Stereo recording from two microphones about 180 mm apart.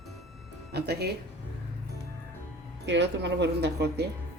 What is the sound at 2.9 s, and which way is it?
A woman's voice, 75° right (ahead or behind).